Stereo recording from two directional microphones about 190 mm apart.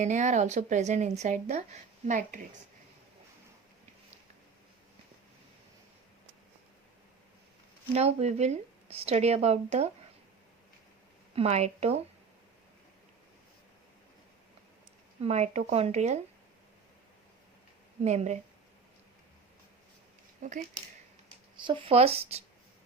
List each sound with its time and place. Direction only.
0.0 s a woman's voice: 40° right (ahead or behind)
7.9 s a woman's voice: 35° right (ahead or behind)
11.3 s a woman's voice: 35° right (ahead or behind)
15.2 s a woman's voice: 35° right (ahead or behind)
18.0 s a woman's voice: 35° right (ahead or behind)
20.4 s a woman's voice: 40° right (ahead or behind)
21.6 s a woman's voice: 25° right (ahead or behind)